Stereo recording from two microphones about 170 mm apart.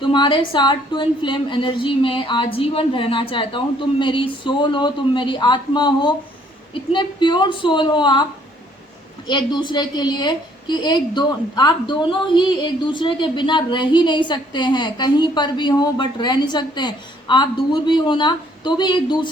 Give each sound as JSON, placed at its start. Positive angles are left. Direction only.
{"t": 0.0, "sound": "a woman's voice", "side_deg": 30}
{"t": 9.2, "sound": "a woman's voice", "side_deg": 25}